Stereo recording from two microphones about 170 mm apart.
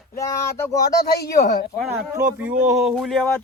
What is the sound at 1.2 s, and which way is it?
Speech, 65° left (ahead or behind).